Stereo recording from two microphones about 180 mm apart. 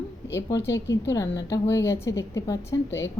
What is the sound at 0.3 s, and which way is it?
A woman's voice, 15° left (ahead or behind).